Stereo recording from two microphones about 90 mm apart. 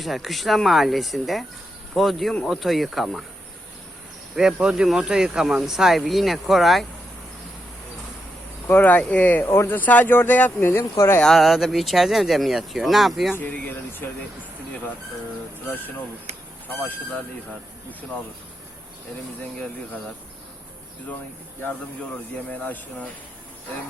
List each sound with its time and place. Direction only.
0.0 s speech: centre (ahead or behind)
4.4 s speech: 10° right (ahead or behind)
8.6 s speech: 20° left (ahead or behind)
11.2 s speech: centre (ahead or behind)
13.3 s speech: 20° left (ahead or behind)
22.4 s speech: 15° left (ahead or behind)